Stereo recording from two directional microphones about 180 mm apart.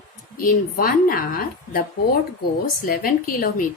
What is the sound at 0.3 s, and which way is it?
A woman's voice, 55° left (ahead or behind).